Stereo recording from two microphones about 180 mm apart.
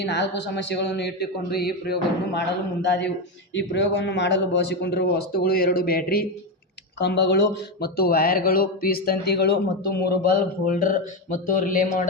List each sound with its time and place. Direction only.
0.0 s a man's voice: 70° left (ahead or behind)
3.5 s a man's voice: 85° left; by 6.2 s 55° left (ahead or behind)
7.0 s speech: 70° left (ahead or behind); by 12.0 s 50° left (ahead or behind)